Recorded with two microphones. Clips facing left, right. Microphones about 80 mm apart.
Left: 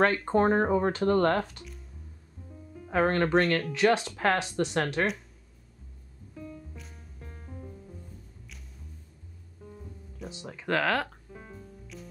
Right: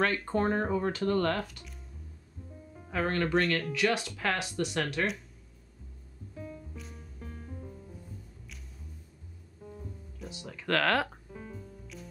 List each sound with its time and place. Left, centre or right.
0.0 s speech: left
2.9 s speech: left
3.7 s speech: left
10.3 s speech: left
10.9 s speech: centre